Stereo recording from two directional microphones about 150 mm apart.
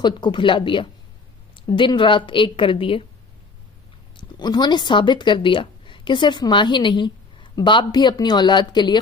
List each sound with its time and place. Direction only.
0.0 s a woman's voice: 30° left (ahead or behind)
4.2 s a woman's voice: 30° left (ahead or behind)